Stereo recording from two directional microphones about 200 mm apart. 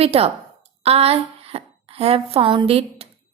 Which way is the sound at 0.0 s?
30° right (ahead or behind).